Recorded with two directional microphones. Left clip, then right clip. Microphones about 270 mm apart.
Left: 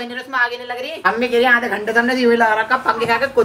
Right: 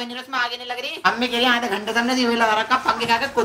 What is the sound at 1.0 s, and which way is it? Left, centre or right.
A woman's voice, centre.